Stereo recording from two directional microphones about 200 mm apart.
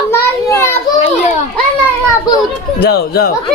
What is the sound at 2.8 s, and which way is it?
Speech, 50° left (ahead or behind).